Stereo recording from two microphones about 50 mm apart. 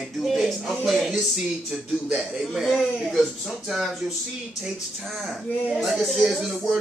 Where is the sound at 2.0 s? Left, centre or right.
Centre.